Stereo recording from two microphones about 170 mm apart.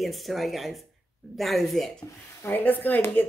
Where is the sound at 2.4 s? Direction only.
10° left (ahead or behind).